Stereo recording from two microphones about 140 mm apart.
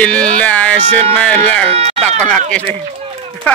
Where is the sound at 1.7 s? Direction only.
50° right (ahead or behind).